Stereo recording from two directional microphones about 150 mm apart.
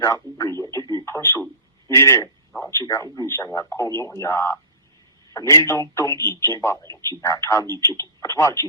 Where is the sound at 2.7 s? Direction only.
20° left (ahead or behind).